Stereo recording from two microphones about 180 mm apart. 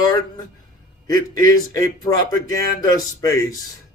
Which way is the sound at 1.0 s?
20° left (ahead or behind).